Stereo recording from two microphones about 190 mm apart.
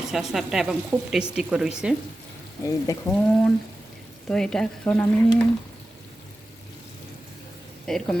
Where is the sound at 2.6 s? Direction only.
15° left (ahead or behind).